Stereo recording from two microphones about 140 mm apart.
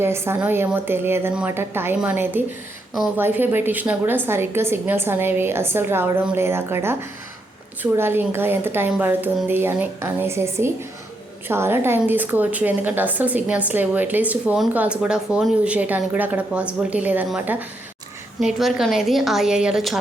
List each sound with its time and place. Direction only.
0.0 s speech: 15° right (ahead or behind)
18.3 s a woman's voice: centre (ahead or behind)